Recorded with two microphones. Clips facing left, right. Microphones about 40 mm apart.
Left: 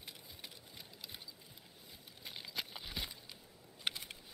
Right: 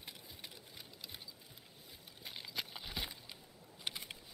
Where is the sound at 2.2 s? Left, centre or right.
Centre.